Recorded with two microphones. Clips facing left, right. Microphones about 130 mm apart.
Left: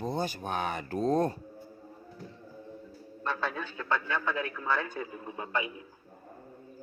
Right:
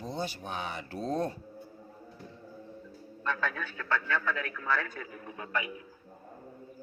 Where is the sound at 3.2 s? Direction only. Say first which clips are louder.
Even; 25° left (ahead or behind).